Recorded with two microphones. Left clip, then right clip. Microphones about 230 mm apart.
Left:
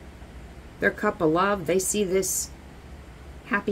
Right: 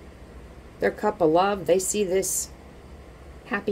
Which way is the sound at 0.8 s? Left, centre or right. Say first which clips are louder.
Right 1 dB; left.